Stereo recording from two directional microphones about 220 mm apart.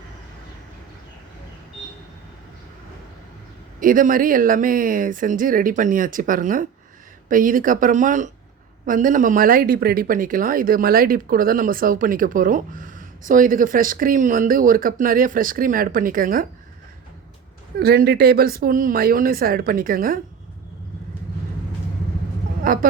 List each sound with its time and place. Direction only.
3.8 s a woman's voice: 40° right (ahead or behind)
17.7 s a woman's voice: 45° right (ahead or behind)
22.6 s speech: 40° right (ahead or behind)